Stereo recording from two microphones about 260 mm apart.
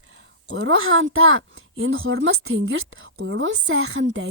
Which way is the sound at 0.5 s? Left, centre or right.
Right.